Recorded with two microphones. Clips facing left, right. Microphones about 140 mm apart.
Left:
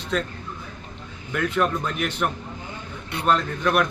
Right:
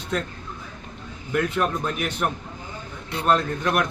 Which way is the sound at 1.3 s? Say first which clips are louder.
Even; 5° right (ahead or behind).